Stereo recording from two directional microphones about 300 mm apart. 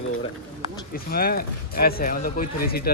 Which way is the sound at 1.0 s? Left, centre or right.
Left.